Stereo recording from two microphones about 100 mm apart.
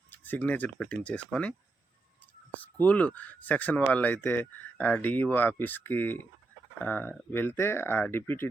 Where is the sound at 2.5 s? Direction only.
15° left (ahead or behind).